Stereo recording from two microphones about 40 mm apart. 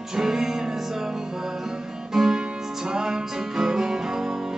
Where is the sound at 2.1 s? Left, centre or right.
Centre.